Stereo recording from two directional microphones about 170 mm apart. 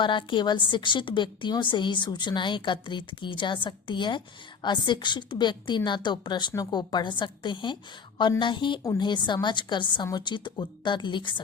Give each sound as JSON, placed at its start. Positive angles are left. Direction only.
{"t": 0.0, "sound": "a woman's voice", "side_deg": 30}